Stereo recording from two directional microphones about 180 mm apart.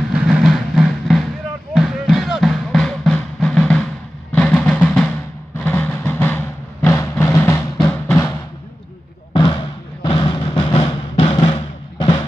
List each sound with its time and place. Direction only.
0.1 s vehicle: 5° right (ahead or behind)
1.7 s music: centre (ahead or behind)
9.3 s basketball bounce: 25° left (ahead or behind)
10.0 s drum: 25° left (ahead or behind)